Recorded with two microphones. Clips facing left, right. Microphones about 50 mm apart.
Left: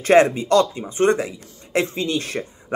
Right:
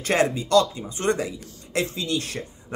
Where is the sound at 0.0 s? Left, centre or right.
Left.